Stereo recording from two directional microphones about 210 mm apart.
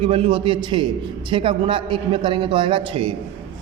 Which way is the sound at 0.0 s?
25° right (ahead or behind).